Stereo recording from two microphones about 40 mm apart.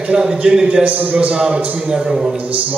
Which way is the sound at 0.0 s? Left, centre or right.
Right.